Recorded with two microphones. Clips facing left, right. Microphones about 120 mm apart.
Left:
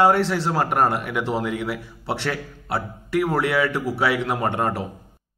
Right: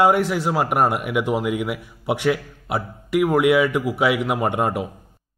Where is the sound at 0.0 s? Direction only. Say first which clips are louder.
Right 1 dB; 10° right (ahead or behind).